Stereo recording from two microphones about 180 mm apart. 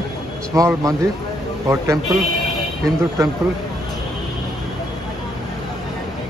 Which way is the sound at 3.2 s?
15° right (ahead or behind).